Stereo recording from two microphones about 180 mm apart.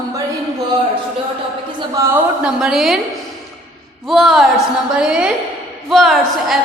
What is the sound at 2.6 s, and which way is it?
Speech, centre (ahead or behind).